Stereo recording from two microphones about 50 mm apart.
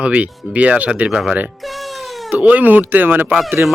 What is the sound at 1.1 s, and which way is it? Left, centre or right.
Speech, centre.